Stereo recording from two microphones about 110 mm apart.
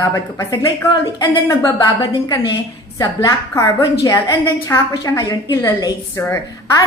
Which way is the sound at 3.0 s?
30° left (ahead or behind).